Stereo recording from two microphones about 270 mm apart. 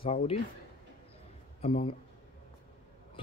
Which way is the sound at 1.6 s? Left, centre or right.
Left.